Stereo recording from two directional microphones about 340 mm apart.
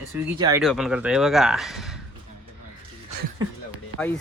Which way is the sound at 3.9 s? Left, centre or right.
Centre.